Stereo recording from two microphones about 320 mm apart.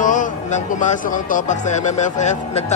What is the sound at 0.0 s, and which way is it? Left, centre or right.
Speech, left.